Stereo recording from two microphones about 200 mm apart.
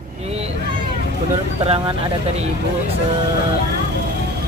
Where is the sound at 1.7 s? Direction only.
30° right (ahead or behind).